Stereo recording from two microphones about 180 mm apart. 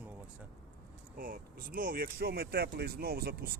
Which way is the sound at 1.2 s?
55° right (ahead or behind).